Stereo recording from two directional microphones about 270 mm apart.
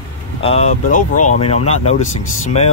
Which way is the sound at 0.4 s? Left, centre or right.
Left.